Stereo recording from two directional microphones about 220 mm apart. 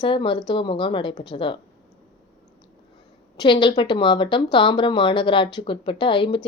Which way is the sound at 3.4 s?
20° left (ahead or behind).